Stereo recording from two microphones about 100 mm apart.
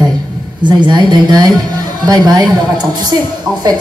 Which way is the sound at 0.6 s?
50° right (ahead or behind).